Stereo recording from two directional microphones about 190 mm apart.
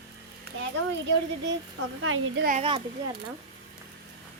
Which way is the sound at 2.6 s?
30° right (ahead or behind).